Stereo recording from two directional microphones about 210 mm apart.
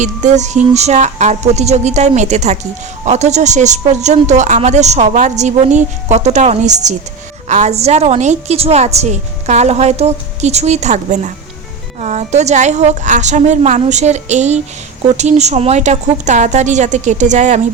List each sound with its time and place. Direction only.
0.0 s a woman's voice: 35° right (ahead or behind)